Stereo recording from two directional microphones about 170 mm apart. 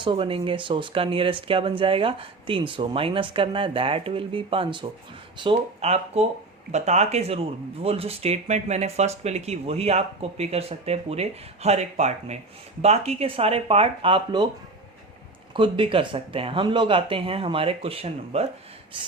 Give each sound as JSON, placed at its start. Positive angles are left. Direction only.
{"t": 0.0, "sound": "speech", "side_deg": -30}
{"t": 15.5, "sound": "speech", "side_deg": -30}